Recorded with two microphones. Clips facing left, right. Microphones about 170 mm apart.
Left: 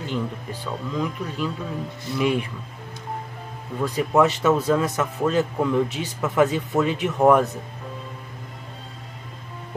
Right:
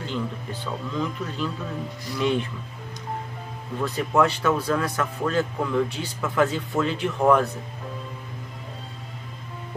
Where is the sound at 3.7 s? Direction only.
15° left (ahead or behind).